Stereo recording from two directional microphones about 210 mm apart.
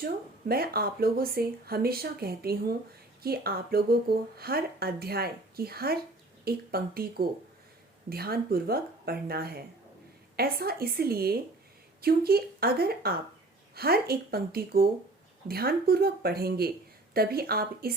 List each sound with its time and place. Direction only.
0.0 s speech: 45° right (ahead or behind)